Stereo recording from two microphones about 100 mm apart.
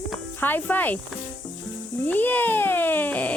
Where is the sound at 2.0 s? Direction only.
20° left (ahead or behind).